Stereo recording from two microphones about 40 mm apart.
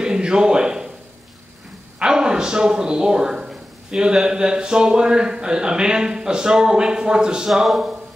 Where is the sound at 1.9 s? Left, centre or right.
Right.